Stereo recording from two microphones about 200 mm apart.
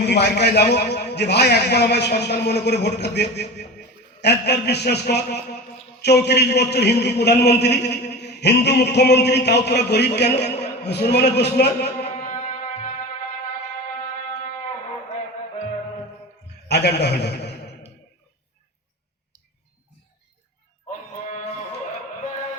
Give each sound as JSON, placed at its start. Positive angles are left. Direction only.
{"t": 0.0, "sound": "a man's voice", "side_deg": 55}
{"t": 12.0, "sound": "music", "side_deg": 40}
{"t": 16.6, "sound": "a man's voice", "side_deg": 55}
{"t": 21.2, "sound": "music", "side_deg": 40}